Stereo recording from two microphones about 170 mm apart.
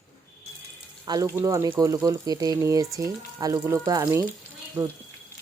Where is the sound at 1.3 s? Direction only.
20° right (ahead or behind).